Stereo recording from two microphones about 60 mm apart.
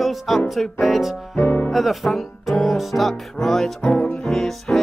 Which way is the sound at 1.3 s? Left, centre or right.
Left.